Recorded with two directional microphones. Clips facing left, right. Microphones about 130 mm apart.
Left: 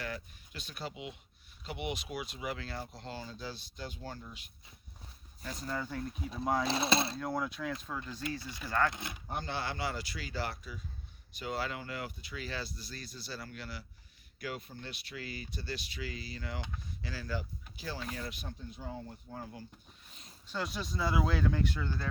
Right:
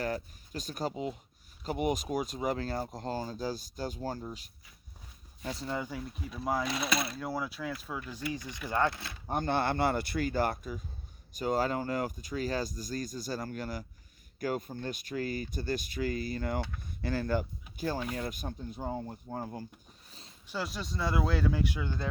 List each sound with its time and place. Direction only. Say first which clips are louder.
0.0 s speech: right 7 dB; 40° right (ahead or behind)
5.5 s speech: right 2 dB; 25° right (ahead or behind)
5.8 s speech: even; 5° right (ahead or behind)
6.7 s speech: left 2 dB; 30° left (ahead or behind)
7.2 s speech: even; 5° right (ahead or behind); by 8.9 s 20° right (ahead or behind)
8.9 s speech: right 1 dB; 20° left (ahead or behind)
9.2 s speech: right 8 dB; 50° right (ahead or behind)
20.5 s speech: right 1 dB; centre (ahead or behind)